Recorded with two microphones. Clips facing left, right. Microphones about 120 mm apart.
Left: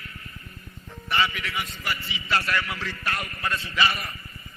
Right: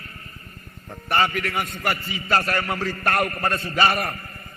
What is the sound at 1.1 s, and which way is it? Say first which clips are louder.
A man's voice: right 5 dB; 50° right (ahead or behind).